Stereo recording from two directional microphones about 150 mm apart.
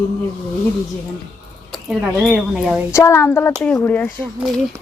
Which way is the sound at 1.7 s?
Centre (ahead or behind).